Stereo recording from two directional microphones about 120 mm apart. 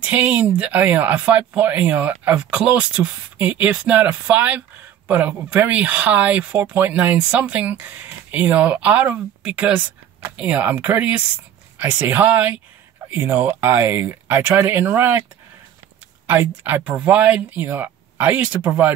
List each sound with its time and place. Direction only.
0.0 s speech: 15° right (ahead or behind)
16.3 s speech: 15° right (ahead or behind)